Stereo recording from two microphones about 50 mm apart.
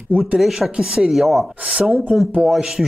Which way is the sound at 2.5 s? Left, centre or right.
Centre.